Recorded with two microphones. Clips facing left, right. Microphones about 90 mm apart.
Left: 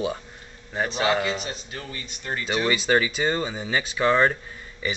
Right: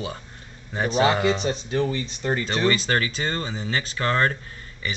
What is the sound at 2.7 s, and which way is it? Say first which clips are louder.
Speech: left 2 dB; 10° left (ahead or behind).